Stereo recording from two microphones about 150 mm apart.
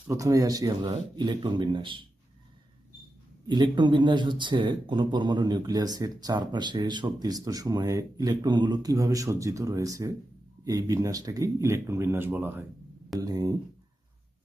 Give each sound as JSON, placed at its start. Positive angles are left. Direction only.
{"t": 0.1, "sound": "speech", "side_deg": -20}
{"t": 3.4, "sound": "speech", "side_deg": -30}
{"t": 13.1, "sound": "speech", "side_deg": -25}